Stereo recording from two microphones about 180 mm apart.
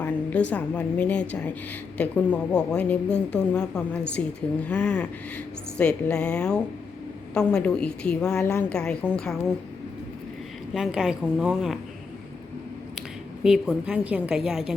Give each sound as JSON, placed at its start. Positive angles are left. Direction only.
{"t": 0.0, "sound": "a woman's voice", "side_deg": 10}
{"t": 10.8, "sound": "speech", "side_deg": -5}
{"t": 13.0, "sound": "a woman's voice", "side_deg": -5}